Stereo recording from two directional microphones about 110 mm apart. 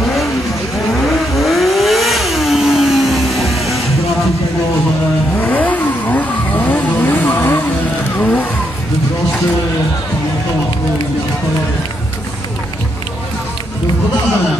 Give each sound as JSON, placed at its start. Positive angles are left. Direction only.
{"t": 0.0, "sound": "vehicle", "side_deg": 0}
{"t": 5.4, "sound": "vehicle", "side_deg": 15}